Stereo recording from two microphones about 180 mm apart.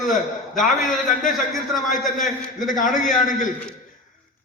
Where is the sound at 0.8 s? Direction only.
45° left (ahead or behind).